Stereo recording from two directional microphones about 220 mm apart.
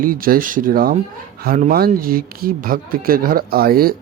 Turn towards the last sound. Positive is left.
turn(degrees=-45)  # may be behind; listen again after turning